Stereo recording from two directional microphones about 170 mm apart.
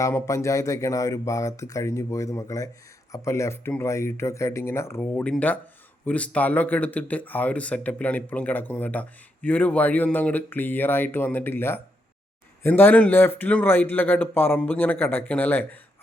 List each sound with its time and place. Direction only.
0.0 s speech: 15° left (ahead or behind)